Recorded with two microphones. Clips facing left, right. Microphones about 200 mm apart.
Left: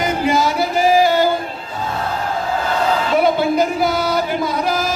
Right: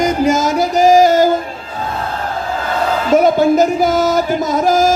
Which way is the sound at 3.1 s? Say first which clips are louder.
Right 7 dB; 45° right (ahead or behind).